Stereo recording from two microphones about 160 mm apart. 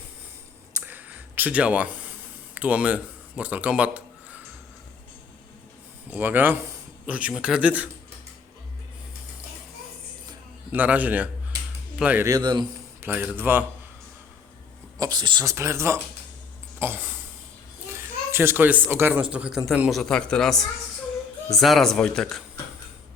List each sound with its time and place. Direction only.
0.8 s a sound: 10° right (ahead or behind)
2.6 s speech: 10° right (ahead or behind)
6.1 s speech: 10° right (ahead or behind)
10.7 s speech: 10° right (ahead or behind)
12.3 s speech: 25° right (ahead or behind)
13.0 s speech: 15° right (ahead or behind)
14.9 s a child's voice: 25° right (ahead or behind); by 22.4 s 5° left (ahead or behind)